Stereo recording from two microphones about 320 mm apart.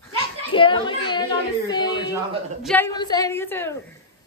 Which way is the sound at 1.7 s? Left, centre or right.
Centre.